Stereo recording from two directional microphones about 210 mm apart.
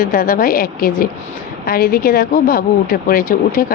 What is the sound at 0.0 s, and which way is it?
Speech, 40° left (ahead or behind).